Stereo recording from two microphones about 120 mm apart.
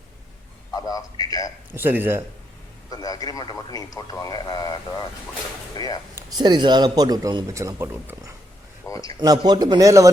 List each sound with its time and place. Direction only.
0.7 s speech: 30° left (ahead or behind)
1.7 s speech: 15° right (ahead or behind)
2.9 s speech: 30° left (ahead or behind)
6.3 s a man's voice: 40° right (ahead or behind)
8.9 s speech: 30° left (ahead or behind)
9.1 s a man's voice: 35° right (ahead or behind)